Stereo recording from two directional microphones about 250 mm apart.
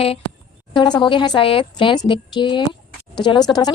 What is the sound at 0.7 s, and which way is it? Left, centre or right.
A woman's voice, centre.